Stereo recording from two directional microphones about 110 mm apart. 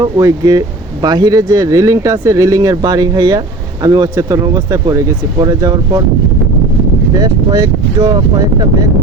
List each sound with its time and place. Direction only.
0.0 s speech: 35° right (ahead or behind)
7.2 s speech: 35° right (ahead or behind)